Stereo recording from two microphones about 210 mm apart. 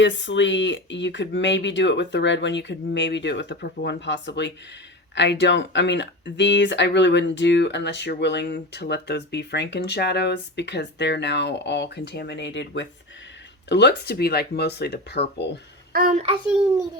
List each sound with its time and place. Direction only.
0.0 s speech: 60° left (ahead or behind)
15.9 s a child's voice: 40° right (ahead or behind)
16.2 s a child's voice: 25° right (ahead or behind)